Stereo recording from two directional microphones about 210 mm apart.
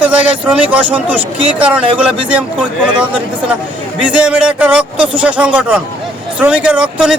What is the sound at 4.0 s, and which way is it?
Speech, 5° right (ahead or behind).